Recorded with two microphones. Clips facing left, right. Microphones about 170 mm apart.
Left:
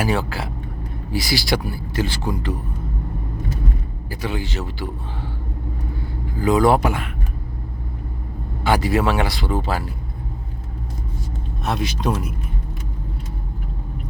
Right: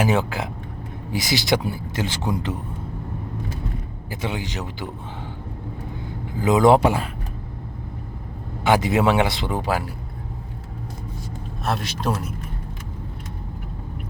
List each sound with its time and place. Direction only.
0.0 s speech: 20° right (ahead or behind)
4.1 s speech: 20° right (ahead or behind)
6.4 s speech: 20° right (ahead or behind)
8.6 s speech: 20° right (ahead or behind)
11.6 s speech: centre (ahead or behind)